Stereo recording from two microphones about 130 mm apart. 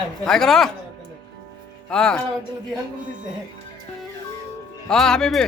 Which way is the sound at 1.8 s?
5° left (ahead or behind).